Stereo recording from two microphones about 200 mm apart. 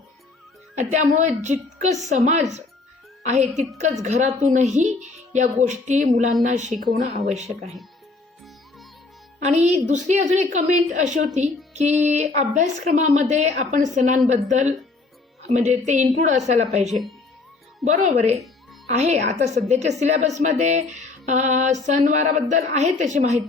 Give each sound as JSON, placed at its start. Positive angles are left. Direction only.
{"t": 0.8, "sound": "a woman's voice", "side_deg": -35}
{"t": 9.4, "sound": "a woman's voice", "side_deg": -35}
{"t": 11.7, "sound": "music", "side_deg": -35}
{"t": 12.0, "sound": "a woman's voice", "side_deg": -35}
{"t": 17.8, "sound": "a woman's voice", "side_deg": -35}